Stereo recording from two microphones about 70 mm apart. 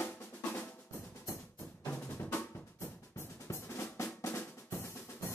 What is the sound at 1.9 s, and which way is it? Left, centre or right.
Drum, left.